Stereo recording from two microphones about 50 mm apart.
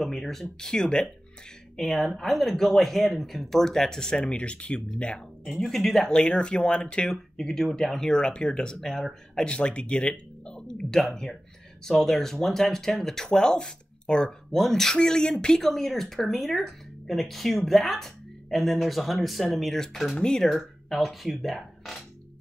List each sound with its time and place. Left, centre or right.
0.0 s speech: centre
1.8 s speech: centre; by 5.2 s left
5.4 s speech: centre
6.0 s speech: centre
7.1 s speech: centre
9.5 s speech: left
20.4 s speech: centre